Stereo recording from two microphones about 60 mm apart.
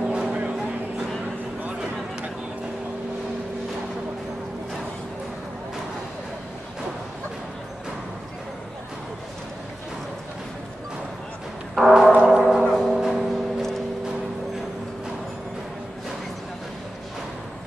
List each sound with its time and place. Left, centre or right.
0.0 s vehicle: centre
11.7 s music: centre
12.3 s gong: centre
12.7 s music: centre